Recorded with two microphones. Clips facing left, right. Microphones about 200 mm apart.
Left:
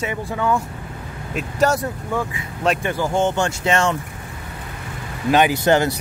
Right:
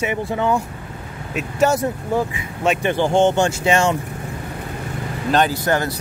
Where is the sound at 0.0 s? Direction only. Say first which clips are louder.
Right 2 dB; 20° right (ahead or behind).